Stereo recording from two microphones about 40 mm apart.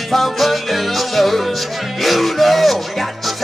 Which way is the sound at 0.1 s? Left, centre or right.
Centre.